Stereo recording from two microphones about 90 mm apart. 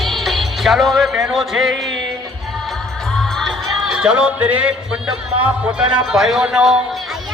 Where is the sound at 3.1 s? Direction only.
5° left (ahead or behind).